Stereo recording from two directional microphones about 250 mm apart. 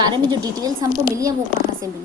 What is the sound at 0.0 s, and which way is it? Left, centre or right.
A woman's voice, centre.